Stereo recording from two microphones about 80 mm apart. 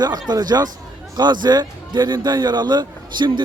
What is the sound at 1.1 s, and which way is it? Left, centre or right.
A man's voice, right.